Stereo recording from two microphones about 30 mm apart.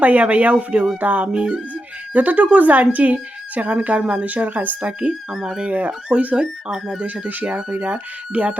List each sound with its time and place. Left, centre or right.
0.0 s speech: right
0.5 s a sound: right
0.9 s speech: right
1.3 s a sound: right
2.1 s speech: right
5.3 s speech: centre
5.6 s speech: right
6.4 s speech: centre
7.3 s speech: right
8.3 s speech: right